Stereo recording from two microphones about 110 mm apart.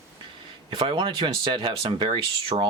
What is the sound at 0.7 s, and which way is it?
Speech, 50° right (ahead or behind).